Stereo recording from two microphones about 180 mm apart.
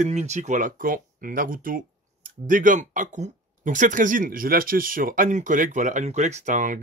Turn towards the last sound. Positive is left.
turn(degrees=-45)  # may be behind; listen again after turning